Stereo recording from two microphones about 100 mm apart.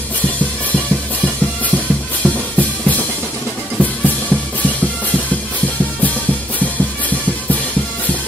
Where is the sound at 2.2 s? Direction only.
15° left (ahead or behind).